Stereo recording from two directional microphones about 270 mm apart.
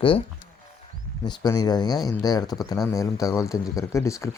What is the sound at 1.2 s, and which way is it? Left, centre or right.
Speech, centre.